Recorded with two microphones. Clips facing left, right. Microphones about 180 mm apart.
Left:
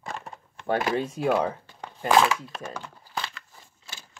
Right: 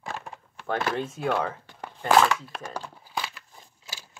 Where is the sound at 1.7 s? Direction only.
5° right (ahead or behind).